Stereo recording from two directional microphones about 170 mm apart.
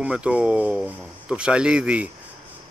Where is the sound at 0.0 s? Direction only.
5° right (ahead or behind).